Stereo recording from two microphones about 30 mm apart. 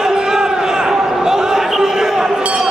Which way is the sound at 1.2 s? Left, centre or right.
Centre.